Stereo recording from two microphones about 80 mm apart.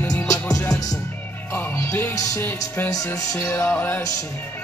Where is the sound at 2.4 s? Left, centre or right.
Left.